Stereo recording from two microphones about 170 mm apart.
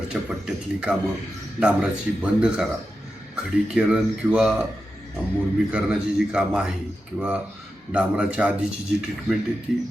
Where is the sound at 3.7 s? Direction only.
5° right (ahead or behind).